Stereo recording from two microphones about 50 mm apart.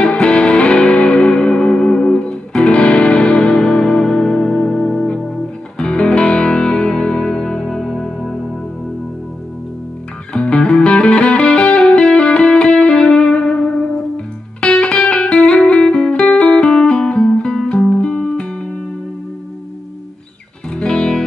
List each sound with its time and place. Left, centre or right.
0.1 s music: left
10.3 s music: centre
20.7 s music: centre